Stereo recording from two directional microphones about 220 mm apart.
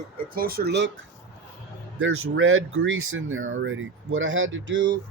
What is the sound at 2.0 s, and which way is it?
Speech, 65° right (ahead or behind).